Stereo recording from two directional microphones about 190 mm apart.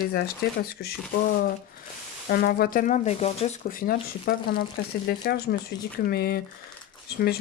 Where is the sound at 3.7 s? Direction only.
50° left (ahead or behind).